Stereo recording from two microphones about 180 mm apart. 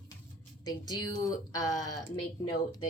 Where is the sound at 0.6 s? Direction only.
20° left (ahead or behind).